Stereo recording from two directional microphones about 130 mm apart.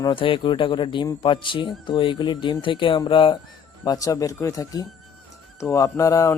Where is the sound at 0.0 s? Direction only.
40° left (ahead or behind).